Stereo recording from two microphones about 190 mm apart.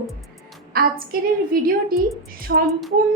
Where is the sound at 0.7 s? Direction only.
50° right (ahead or behind).